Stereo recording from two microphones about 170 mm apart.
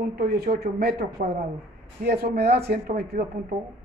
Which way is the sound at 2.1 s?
70° right (ahead or behind).